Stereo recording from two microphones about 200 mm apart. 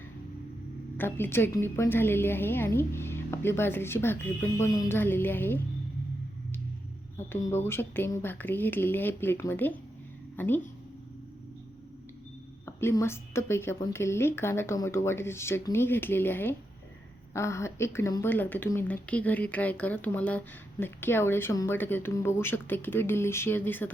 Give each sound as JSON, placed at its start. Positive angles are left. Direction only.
{"t": 0.9, "sound": "speech", "side_deg": 10}
{"t": 7.2, "sound": "speech", "side_deg": 15}
{"t": 12.6, "sound": "speech", "side_deg": 15}